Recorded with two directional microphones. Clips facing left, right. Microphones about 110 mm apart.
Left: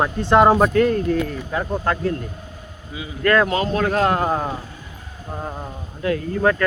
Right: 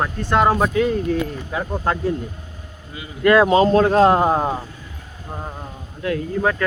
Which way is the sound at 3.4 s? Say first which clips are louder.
Right 6 dB; 30° right (ahead or behind).